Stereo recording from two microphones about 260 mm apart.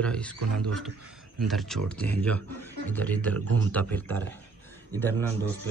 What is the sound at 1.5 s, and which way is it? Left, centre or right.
Speech, centre.